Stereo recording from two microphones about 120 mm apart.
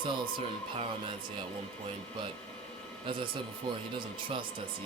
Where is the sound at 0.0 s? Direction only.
45° right (ahead or behind).